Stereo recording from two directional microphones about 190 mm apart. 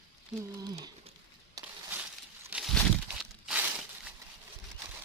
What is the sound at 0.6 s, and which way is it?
Speech, 20° right (ahead or behind).